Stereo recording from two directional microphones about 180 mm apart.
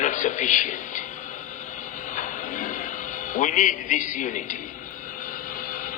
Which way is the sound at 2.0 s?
45° left (ahead or behind).